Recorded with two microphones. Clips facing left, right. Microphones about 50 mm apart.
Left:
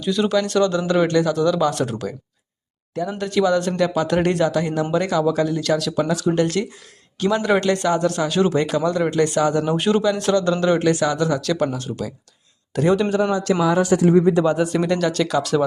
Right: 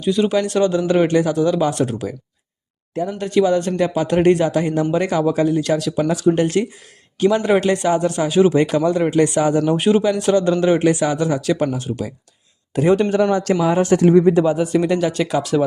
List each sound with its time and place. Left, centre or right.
0.0 s speech: centre
1.7 s speech: centre
3.2 s speech: centre
8.5 s speech: right
9.0 s speech: centre
13.0 s a man's voice: right
13.6 s a man's voice: right
13.9 s speech: right
14.4 s speech: centre